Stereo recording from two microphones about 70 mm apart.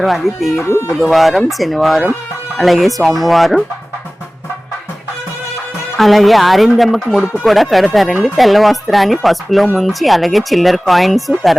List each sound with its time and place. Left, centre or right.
0.0 s speech: centre
0.6 s speech: left
0.9 s speech: centre
6.0 s speech: centre